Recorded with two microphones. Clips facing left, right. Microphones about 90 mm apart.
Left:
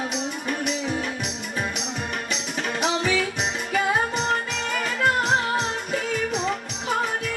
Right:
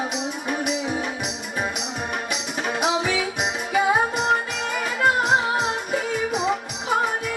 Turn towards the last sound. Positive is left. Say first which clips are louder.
# right 3 dB
turn(degrees=-5)  # may be behind; listen again after turning